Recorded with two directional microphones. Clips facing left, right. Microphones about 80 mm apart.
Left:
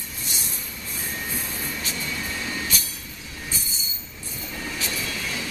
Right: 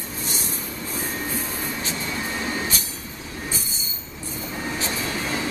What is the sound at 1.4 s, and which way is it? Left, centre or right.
Train, right.